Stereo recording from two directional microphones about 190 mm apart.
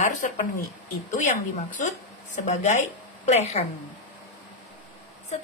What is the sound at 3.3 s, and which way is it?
Speech, 35° left (ahead or behind).